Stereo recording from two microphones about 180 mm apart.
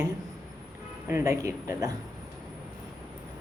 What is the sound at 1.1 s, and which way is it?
Speech, 15° right (ahead or behind).